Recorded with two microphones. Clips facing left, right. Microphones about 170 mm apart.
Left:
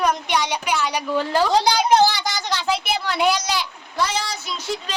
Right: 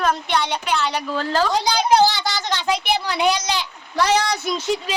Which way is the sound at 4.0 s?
75° right (ahead or behind).